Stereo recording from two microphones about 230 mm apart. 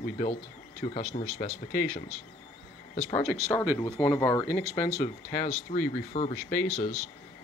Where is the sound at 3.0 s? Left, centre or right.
Centre.